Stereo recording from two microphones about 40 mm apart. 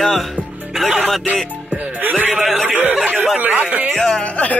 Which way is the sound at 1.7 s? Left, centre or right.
Right.